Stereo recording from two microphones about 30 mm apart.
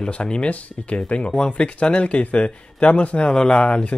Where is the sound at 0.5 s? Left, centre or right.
Left.